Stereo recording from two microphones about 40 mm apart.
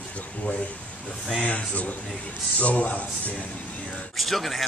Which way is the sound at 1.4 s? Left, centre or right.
Left.